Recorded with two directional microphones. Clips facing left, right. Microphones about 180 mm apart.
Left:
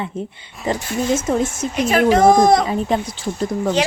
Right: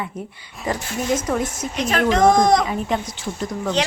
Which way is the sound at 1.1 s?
25° left (ahead or behind).